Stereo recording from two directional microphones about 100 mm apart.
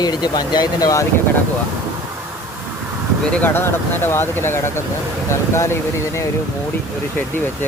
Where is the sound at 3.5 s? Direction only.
25° left (ahead or behind).